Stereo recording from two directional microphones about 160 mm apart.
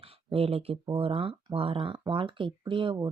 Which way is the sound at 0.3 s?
35° right (ahead or behind).